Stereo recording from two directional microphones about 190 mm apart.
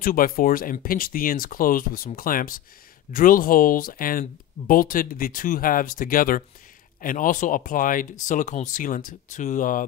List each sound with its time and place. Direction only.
0.0 s speech: 50° left (ahead or behind)